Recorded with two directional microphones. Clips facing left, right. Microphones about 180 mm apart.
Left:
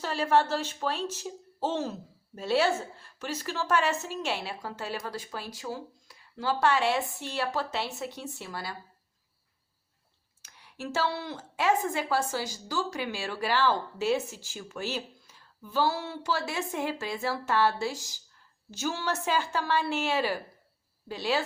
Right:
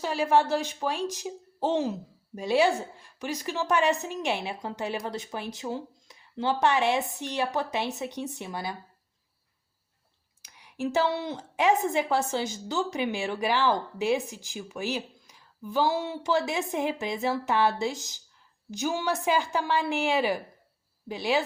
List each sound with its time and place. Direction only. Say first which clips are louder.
0.0 s speech: right 2 dB; 10° right (ahead or behind)
10.4 s speech: right 7 dB; 15° right (ahead or behind)